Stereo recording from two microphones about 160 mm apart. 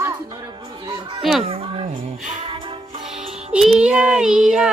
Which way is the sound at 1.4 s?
35° right (ahead or behind).